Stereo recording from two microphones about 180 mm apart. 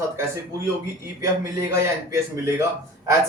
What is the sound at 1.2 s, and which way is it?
Speech, 15° right (ahead or behind).